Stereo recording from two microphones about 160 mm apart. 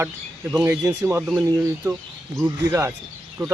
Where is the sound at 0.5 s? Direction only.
15° right (ahead or behind).